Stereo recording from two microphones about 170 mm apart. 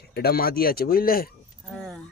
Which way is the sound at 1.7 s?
Centre (ahead or behind).